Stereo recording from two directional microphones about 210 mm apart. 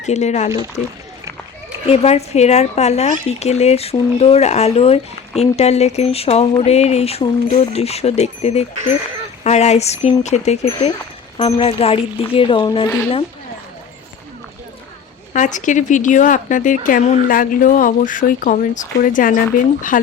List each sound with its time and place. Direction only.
0.0 s speech: 35° left (ahead or behind)
1.9 s speech: 30° left (ahead or behind)
15.3 s speech: 35° left (ahead or behind)